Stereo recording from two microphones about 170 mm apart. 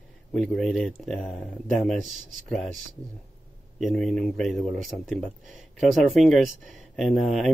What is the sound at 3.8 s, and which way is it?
Speech, 5° left (ahead or behind).